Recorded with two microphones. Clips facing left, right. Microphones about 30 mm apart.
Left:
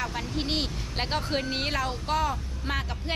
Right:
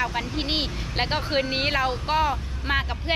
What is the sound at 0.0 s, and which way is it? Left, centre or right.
Speech, right.